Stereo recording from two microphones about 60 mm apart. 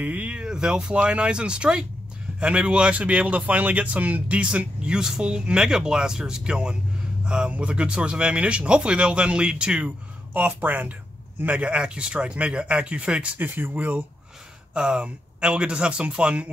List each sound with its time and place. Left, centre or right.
0.0 s speech: right
10.3 s speech: right
13.4 s speech: right
14.7 s speech: centre